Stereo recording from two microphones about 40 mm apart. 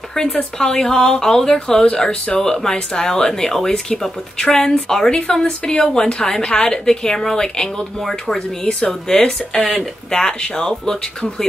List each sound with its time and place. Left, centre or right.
0.1 s a woman's voice: centre
9.1 s a woman's voice: centre